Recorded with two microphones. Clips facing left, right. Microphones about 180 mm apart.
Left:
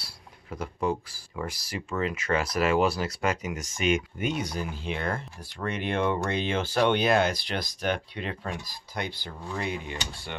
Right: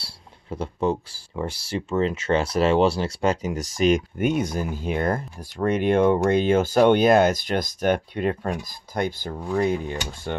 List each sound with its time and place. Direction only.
0.0 s speech: 30° right (ahead or behind)
4.2 s speech: 50° right (ahead or behind)